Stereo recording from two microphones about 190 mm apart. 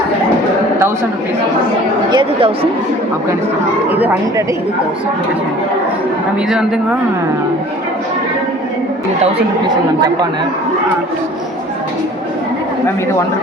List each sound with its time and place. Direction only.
2.0 s speech: 25° right (ahead or behind)
4.0 s speech: 10° right (ahead or behind)